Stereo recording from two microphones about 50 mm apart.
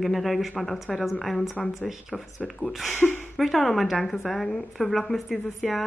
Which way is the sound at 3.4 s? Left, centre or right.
Centre.